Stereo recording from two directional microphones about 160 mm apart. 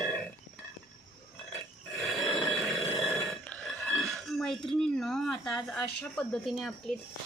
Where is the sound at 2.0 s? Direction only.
Centre (ahead or behind).